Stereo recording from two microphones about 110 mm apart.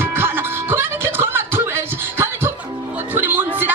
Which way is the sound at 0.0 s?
20° right (ahead or behind).